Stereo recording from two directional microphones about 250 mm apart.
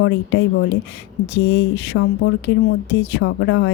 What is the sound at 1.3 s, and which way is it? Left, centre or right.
Speech, left.